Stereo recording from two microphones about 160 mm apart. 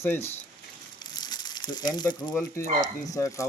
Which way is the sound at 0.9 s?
25° left (ahead or behind).